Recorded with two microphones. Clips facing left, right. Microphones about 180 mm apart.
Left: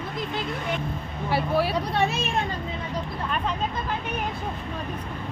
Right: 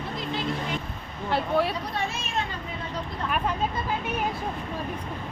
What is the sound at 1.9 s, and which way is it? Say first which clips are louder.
Speech: left 6 dB; 65° left (ahead or behind).